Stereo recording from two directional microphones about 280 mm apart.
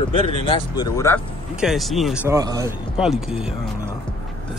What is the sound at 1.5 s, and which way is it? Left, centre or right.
Speech, centre.